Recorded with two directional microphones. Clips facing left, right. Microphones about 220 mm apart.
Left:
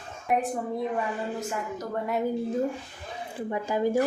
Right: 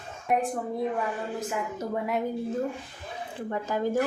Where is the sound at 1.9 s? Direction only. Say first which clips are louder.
Even; centre (ahead or behind).